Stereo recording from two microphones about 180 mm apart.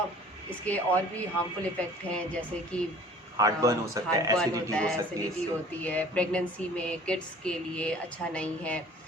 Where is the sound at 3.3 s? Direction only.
20° right (ahead or behind).